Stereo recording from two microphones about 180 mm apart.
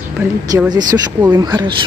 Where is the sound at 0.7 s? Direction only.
20° right (ahead or behind).